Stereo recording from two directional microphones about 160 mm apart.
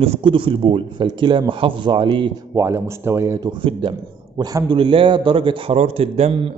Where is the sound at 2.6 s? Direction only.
15° right (ahead or behind).